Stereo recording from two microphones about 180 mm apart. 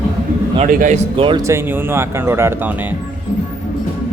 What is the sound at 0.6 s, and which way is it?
Speech, 45° right (ahead or behind).